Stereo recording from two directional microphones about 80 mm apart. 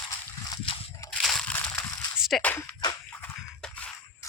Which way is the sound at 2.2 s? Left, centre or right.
Centre.